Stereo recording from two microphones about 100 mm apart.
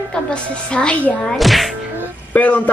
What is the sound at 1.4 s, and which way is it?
Speech, centre (ahead or behind).